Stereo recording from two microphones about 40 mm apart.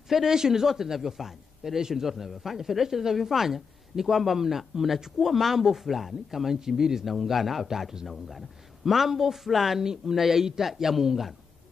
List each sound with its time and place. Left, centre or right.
0.1 s a man's voice: centre
7.1 s a man's voice: centre